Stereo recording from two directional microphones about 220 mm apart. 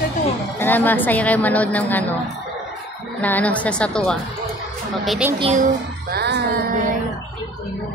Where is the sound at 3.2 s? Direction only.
5° left (ahead or behind).